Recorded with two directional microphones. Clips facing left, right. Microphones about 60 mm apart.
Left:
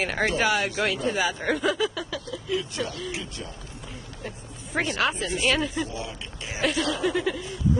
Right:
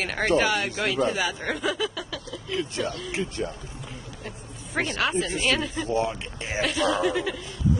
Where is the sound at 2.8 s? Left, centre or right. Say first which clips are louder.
Right 2 dB; right.